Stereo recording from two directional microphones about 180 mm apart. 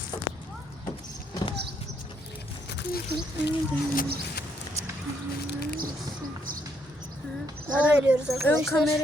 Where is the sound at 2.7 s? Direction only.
65° left (ahead or behind).